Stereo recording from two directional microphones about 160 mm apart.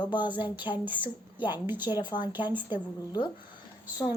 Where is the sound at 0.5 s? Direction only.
30° left (ahead or behind).